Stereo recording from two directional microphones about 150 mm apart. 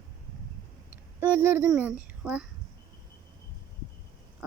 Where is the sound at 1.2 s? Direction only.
10° right (ahead or behind).